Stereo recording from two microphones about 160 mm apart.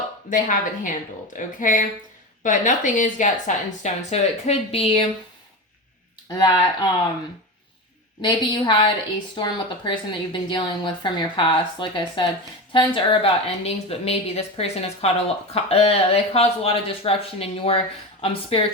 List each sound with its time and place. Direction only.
0.3 s speech: 55° left (ahead or behind); by 5.0 s 35° left (ahead or behind)
6.2 s speech: 25° left (ahead or behind)
8.2 s a woman's voice: 30° left (ahead or behind)